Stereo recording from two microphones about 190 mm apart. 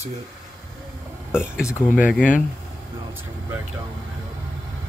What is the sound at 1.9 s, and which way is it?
Speech, 5° right (ahead or behind).